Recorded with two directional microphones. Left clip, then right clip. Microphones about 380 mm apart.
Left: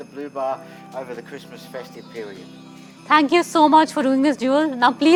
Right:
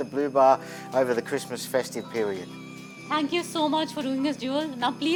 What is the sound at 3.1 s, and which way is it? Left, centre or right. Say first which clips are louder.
A woman's voice: left 11 dB; left.